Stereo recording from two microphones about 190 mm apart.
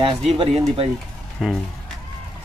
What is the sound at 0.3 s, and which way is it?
Speech, 30° right (ahead or behind).